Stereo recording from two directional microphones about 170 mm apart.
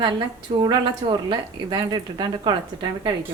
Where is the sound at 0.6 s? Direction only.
30° right (ahead or behind).